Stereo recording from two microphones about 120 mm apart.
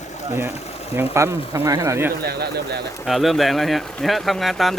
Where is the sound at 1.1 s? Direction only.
25° right (ahead or behind).